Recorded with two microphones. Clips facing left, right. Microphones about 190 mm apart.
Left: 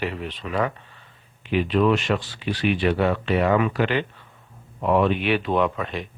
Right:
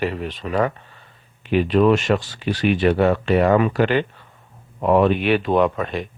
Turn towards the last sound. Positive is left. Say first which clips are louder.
# right 4 dB
turn(degrees=-45)  # may be behind; listen again after turning